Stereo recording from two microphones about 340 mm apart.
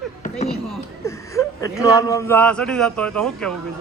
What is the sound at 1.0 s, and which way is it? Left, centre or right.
Speech, centre.